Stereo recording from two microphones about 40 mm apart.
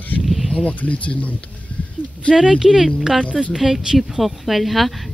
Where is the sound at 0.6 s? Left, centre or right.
Left.